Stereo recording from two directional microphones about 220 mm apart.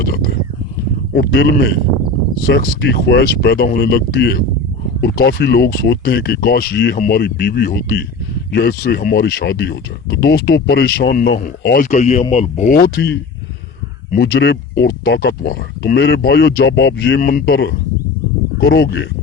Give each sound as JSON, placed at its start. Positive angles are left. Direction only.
{"t": 0.0, "sound": "speech", "side_deg": 45}